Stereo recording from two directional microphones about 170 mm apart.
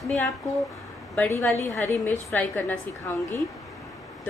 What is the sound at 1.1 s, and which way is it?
A woman's voice, 10° left (ahead or behind).